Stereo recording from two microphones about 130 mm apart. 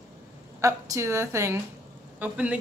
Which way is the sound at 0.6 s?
25° right (ahead or behind).